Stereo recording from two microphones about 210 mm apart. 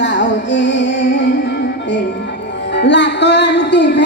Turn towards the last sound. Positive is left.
turn(degrees=55)  # may be behind; listen again after turning